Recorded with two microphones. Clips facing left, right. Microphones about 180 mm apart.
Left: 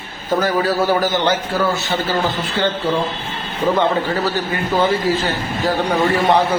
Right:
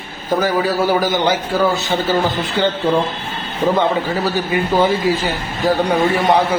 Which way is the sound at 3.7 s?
10° right (ahead or behind).